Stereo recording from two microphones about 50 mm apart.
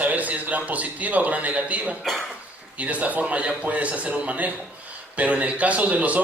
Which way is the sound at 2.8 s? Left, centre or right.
Right.